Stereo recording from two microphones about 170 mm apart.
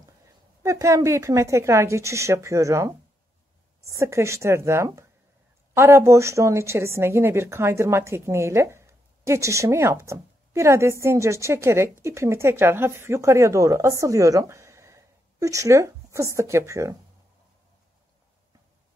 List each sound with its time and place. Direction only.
0.6 s speech: 20° right (ahead or behind)